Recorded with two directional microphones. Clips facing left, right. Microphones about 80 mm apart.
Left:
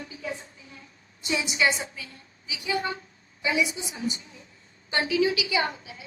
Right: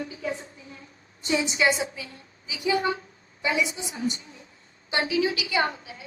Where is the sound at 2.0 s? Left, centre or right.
Right.